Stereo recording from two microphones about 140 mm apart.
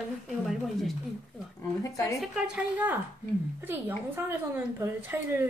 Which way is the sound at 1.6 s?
25° left (ahead or behind).